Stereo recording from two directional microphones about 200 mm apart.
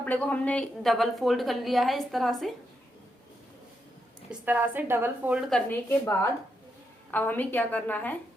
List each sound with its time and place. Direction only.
0.0 s a woman's voice: 10° left (ahead or behind)
4.3 s a woman's voice: 10° right (ahead or behind); by 8.2 s 10° left (ahead or behind)